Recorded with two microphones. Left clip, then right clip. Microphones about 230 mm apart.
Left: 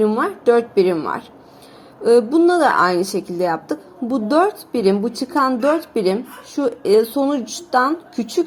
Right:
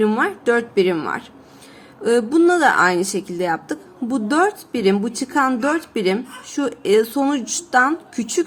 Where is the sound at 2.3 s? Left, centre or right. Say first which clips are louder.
Even; centre.